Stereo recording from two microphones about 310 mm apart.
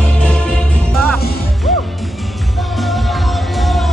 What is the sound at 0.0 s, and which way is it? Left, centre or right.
Music, centre.